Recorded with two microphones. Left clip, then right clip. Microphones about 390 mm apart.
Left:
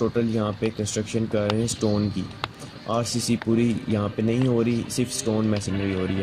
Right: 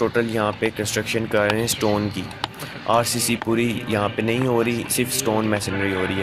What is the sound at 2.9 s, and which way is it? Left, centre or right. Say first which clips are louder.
Speech: right 6 dB; right.